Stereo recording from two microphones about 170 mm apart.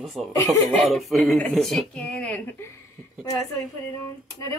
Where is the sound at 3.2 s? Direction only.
20° left (ahead or behind).